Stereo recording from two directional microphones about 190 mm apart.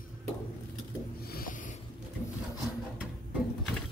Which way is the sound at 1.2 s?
50° left (ahead or behind).